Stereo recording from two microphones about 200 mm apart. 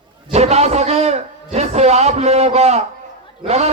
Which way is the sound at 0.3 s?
30° right (ahead or behind).